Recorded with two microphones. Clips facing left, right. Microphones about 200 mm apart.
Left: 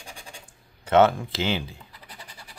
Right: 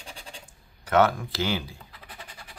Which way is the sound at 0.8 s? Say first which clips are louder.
Left 3 dB; 25° left (ahead or behind).